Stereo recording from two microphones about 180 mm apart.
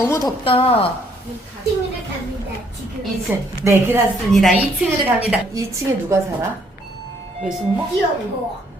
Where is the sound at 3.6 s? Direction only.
15° right (ahead or behind).